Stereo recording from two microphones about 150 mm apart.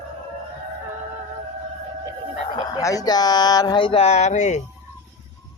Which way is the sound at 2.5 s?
30° left (ahead or behind).